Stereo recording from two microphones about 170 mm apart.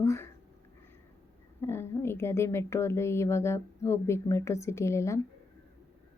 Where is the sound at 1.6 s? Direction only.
15° left (ahead or behind).